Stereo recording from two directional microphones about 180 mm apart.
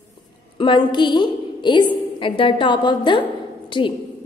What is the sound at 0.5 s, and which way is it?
A woman's voice, 25° left (ahead or behind).